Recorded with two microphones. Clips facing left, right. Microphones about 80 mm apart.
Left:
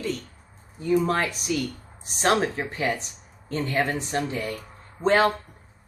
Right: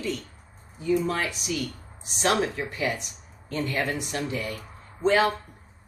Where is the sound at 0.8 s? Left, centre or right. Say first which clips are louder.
Left 3 dB; left.